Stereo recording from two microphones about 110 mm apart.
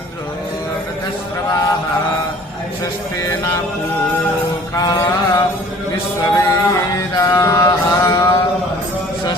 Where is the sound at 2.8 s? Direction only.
30° left (ahead or behind).